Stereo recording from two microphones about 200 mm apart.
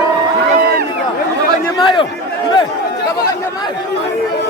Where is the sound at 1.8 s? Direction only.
25° left (ahead or behind).